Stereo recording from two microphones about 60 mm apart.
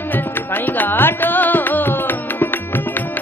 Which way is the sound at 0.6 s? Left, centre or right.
Left.